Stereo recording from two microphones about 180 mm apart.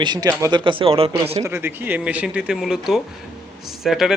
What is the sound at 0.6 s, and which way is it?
Speech, 30° right (ahead or behind).